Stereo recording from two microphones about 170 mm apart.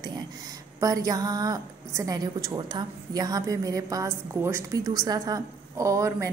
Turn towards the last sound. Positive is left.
turn(degrees=-20)  # may be behind; listen again after turning